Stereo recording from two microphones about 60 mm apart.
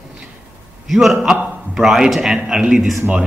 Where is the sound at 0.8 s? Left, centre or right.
Centre.